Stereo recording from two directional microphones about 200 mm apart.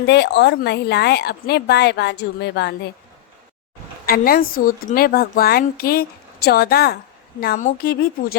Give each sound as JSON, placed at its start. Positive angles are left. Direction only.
{"t": 0.0, "sound": "a woman's voice", "side_deg": 60}
{"t": 4.0, "sound": "a woman's voice", "side_deg": 50}